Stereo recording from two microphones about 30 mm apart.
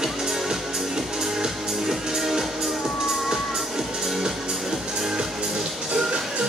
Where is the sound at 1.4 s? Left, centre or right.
Centre.